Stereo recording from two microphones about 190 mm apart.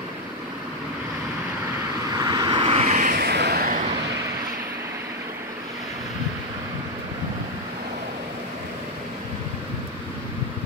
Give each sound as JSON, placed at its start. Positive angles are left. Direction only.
{"t": 2.1, "sound": "vehicle", "side_deg": -20}
{"t": 3.2, "sound": "vehicle", "side_deg": -60}